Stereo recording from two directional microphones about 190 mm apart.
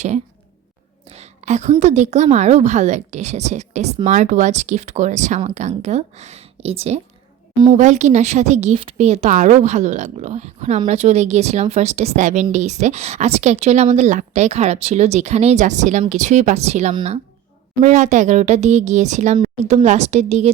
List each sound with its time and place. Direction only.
1.0 s whispering: 35° right (ahead or behind)
1.8 s speech: 35° right (ahead or behind)
17.7 s speech: 40° right (ahead or behind)